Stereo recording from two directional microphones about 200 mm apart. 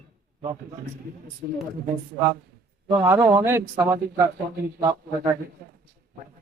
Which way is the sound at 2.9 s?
15° right (ahead or behind).